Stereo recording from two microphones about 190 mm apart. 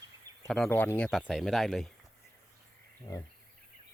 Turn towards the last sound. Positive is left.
turn(degrees=20)  # may be behind; listen again after turning